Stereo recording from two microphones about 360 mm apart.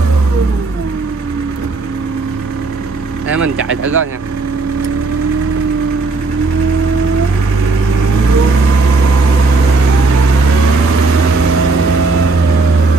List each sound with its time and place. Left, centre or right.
3.6 s speech: right